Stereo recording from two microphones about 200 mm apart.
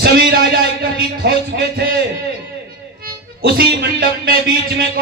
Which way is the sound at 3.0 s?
50° right (ahead or behind).